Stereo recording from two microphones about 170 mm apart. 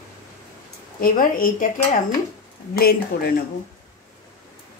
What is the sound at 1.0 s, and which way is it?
Speech, 55° left (ahead or behind).